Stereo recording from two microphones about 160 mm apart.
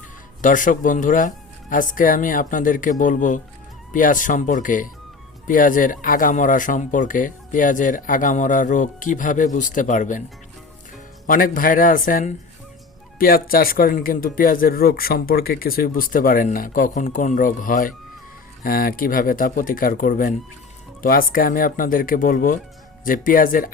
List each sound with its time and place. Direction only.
0.4 s speech: 55° left (ahead or behind)
11.3 s speech: 60° left (ahead or behind)